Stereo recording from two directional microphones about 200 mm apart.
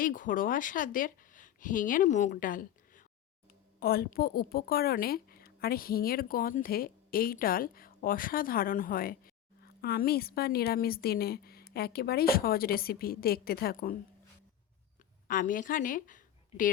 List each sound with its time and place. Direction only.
0.0 s a woman's voice: 40° left (ahead or behind)
15.3 s a woman's voice: 40° left (ahead or behind)